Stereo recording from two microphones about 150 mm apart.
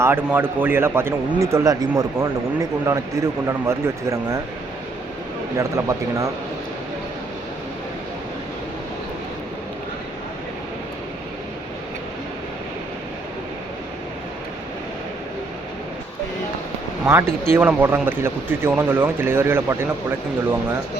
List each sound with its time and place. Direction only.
0.0 s a man's voice: 15° right (ahead or behind)
5.5 s a man's voice: 20° right (ahead or behind)
17.5 s speech: 15° right (ahead or behind)